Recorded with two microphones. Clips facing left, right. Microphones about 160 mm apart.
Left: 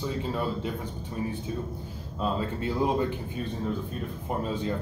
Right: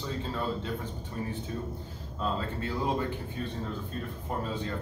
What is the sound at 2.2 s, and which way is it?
Speech, 15° left (ahead or behind).